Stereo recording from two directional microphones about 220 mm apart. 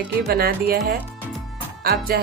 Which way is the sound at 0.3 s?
45° right (ahead or behind).